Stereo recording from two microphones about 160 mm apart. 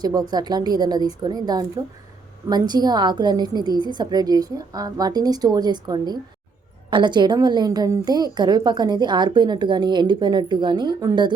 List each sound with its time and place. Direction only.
0.0 s a woman's voice: 25° right (ahead or behind)